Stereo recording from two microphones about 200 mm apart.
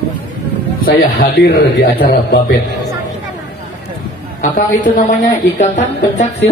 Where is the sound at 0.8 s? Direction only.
50° left (ahead or behind).